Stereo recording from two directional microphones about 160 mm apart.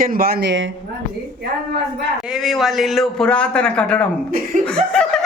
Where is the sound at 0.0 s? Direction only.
65° right (ahead or behind); by 0.5 s 80° right.